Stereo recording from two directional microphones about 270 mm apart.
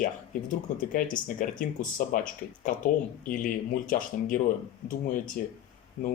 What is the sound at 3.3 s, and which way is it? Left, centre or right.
Speech, left.